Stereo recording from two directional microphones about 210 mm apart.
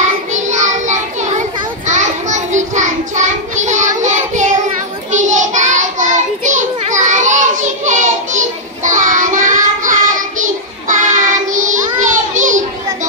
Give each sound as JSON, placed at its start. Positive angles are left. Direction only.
{"t": 0.0, "sound": "child singing", "side_deg": -35}